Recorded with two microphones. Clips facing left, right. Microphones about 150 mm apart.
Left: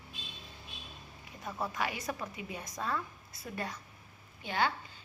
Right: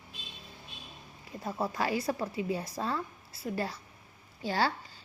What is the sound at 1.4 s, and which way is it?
A woman's voice, 35° right (ahead or behind).